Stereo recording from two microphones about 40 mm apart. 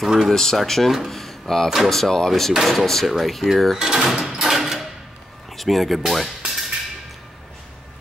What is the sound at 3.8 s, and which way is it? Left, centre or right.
Speech, centre.